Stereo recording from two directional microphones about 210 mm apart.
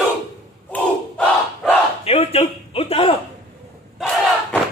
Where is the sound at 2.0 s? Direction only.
30° left (ahead or behind).